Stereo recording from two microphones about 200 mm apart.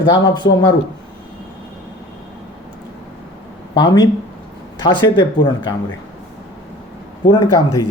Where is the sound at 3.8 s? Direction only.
20° left (ahead or behind).